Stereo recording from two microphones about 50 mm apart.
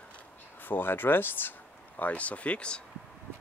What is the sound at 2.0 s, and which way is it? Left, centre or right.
Speech, left.